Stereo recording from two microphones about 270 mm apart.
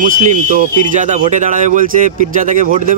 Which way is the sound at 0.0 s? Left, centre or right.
Right.